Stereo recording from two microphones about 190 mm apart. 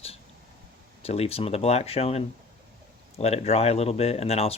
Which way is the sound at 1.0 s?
30° left (ahead or behind).